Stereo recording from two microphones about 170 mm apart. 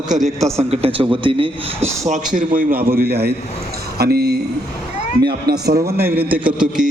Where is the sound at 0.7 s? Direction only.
35° right (ahead or behind).